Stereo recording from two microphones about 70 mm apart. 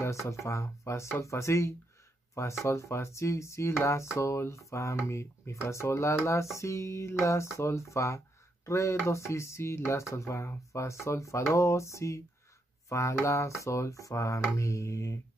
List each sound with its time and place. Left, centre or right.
0.0 s speech: left